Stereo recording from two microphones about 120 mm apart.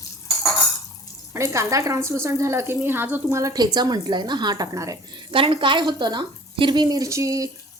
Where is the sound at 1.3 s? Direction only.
25° right (ahead or behind).